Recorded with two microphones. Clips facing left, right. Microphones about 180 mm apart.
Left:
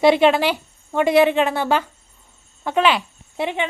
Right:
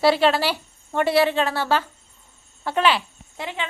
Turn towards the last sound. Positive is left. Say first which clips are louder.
# left 7 dB
turn(degrees=20)  # may be behind; listen again after turning